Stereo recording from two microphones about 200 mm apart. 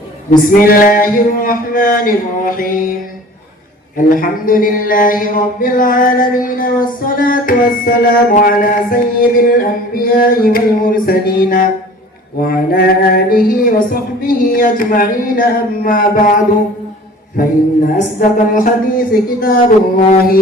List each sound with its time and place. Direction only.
0.3 s speech: 45° left (ahead or behind)
3.9 s speech: 45° left (ahead or behind)
18.2 s speech: 45° left (ahead or behind)